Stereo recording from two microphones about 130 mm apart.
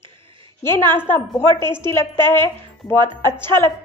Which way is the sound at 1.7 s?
20° left (ahead or behind).